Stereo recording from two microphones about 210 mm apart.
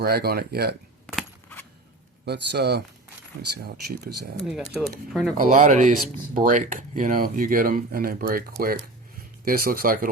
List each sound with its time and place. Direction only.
0.0 s speech: 45° right (ahead or behind)
1.0 s a sound: 10° left (ahead or behind)
2.2 s speech: 50° right (ahead or behind)
4.4 s speech: centre (ahead or behind)
5.4 s speech: 35° right (ahead or behind)